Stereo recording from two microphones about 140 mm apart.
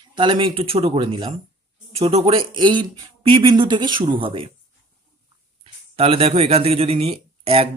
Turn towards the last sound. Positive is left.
turn(degrees=-45)  # may be behind; listen again after turning